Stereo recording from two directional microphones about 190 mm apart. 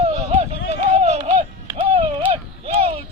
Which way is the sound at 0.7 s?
35° right (ahead or behind).